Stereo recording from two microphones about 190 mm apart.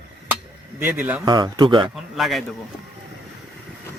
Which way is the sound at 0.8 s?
10° right (ahead or behind).